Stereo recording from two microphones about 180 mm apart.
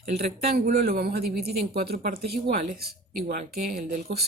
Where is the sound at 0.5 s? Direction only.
60° right (ahead or behind).